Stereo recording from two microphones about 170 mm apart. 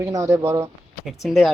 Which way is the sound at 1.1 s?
Centre (ahead or behind).